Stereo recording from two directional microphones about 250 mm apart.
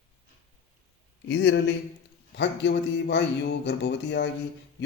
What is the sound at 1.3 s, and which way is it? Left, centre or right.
Speech, left.